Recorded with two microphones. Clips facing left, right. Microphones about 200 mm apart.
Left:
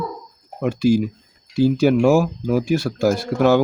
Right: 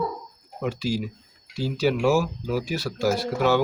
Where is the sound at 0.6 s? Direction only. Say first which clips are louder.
Left 9 dB; 50° left (ahead or behind).